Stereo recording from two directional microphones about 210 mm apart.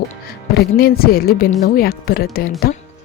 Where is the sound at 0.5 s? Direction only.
45° left (ahead or behind).